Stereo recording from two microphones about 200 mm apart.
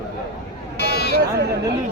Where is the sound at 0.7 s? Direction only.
55° left (ahead or behind).